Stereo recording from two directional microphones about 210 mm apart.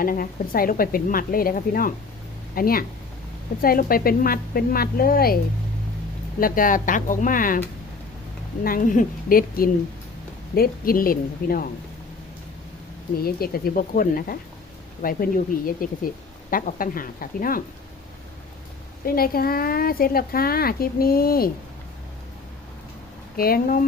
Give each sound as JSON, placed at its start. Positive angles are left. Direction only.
{"t": 0.0, "sound": "speech", "side_deg": 40}
{"t": 6.4, "sound": "speech", "side_deg": 40}
{"t": 8.6, "sound": "speech", "side_deg": 40}
{"t": 13.1, "sound": "speech", "side_deg": 45}
{"t": 19.0, "sound": "speech", "side_deg": 45}
{"t": 23.4, "sound": "speech", "side_deg": 45}